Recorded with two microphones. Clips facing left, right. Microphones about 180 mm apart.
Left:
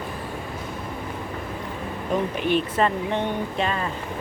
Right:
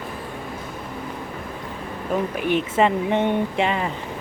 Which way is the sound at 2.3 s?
10° right (ahead or behind).